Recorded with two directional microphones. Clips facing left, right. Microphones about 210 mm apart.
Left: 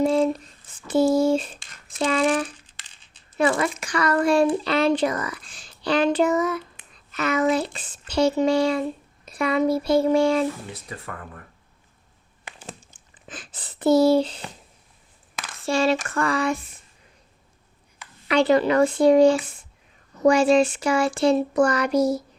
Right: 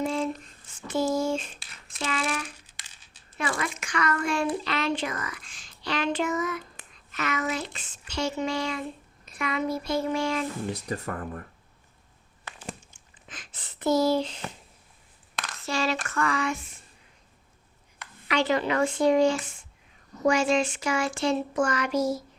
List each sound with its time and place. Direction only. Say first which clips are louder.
0.0 s a sound: left 8 dB; 35° left (ahead or behind)
1.2 s speech: left 8 dB; 35° left (ahead or behind)
1.5 s a sound: left 2 dB; 5° right (ahead or behind)
2.0 s speech: left 9 dB; 35° left (ahead or behind)
2.6 s coin: even; 10° right (ahead or behind)
3.3 s speech: left 9 dB; 35° left (ahead or behind)
6.9 s speech: left 7 dB; 35° left (ahead or behind)
10.7 s speech: right 5 dB; 40° right (ahead or behind)
12.5 s a sound: left 1 dB; 15° left (ahead or behind)
13.3 s speech: left 6 dB; 30° left (ahead or behind)
15.6 s speech: left 7 dB; 30° left (ahead or behind)
18.3 s speech: left 7 dB; 35° left (ahead or behind)